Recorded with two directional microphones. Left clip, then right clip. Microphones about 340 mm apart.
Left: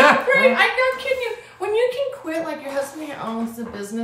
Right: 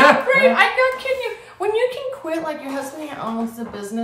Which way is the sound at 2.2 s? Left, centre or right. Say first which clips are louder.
Right 1 dB; centre.